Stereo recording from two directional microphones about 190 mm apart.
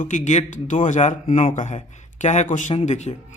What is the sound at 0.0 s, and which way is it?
Speech, 40° left (ahead or behind).